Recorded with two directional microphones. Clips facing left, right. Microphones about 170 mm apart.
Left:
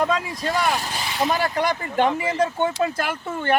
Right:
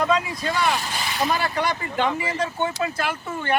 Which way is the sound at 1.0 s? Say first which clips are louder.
Left 1 dB; 25° left (ahead or behind).